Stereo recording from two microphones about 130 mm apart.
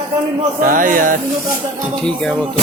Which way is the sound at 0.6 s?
90° right.